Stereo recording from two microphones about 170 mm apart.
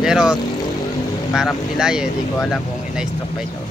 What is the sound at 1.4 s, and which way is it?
Speech, 5° right (ahead or behind).